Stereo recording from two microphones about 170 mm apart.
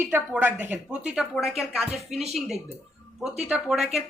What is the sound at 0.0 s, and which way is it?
Speech, 10° right (ahead or behind).